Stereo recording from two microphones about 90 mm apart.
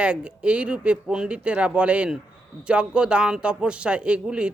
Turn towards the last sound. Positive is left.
turn(degrees=-10)  # may be behind; listen again after turning